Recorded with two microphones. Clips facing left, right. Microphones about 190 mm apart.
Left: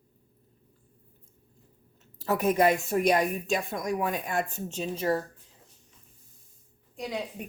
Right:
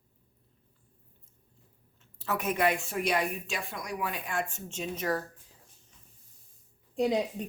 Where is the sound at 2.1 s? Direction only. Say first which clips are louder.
Left 6 dB; 35° left (ahead or behind).